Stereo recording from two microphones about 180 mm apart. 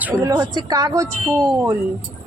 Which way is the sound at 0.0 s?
10° right (ahead or behind).